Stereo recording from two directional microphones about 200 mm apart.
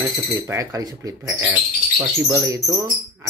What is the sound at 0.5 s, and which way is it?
Speech, 15° right (ahead or behind).